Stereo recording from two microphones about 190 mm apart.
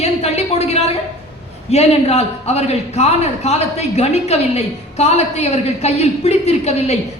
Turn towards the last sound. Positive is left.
turn(degrees=35)  # may be behind; listen again after turning